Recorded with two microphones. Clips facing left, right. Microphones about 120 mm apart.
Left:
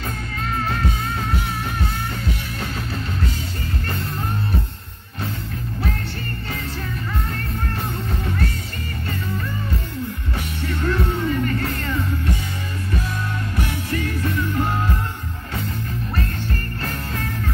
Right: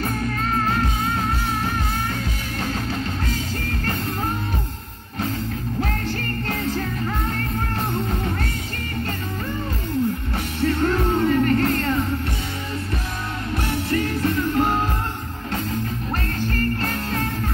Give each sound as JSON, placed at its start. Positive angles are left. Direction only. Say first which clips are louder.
{"t": 10.8, "sound": "music", "louder": "right 1 dB", "side_deg": -40}
{"t": 13.9, "sound": "music", "louder": "right 2 dB", "side_deg": -40}